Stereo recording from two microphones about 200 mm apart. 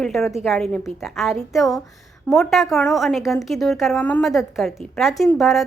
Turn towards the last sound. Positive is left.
turn(degrees=0)  # may be behind; listen again after turning